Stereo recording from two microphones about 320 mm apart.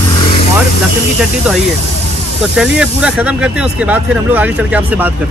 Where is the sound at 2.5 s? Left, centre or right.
Centre.